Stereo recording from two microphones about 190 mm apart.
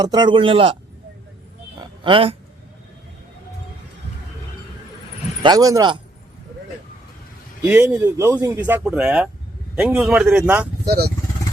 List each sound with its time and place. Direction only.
0.0 s speech: 20° right (ahead or behind)
1.8 s a sound: 30° right (ahead or behind)
5.4 s speech: 20° right (ahead or behind)
7.6 s speech: 10° right (ahead or behind)
10.8 s speech: 55° right (ahead or behind)